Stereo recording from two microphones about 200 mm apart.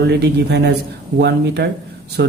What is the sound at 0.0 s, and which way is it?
Speech, 55° right (ahead or behind).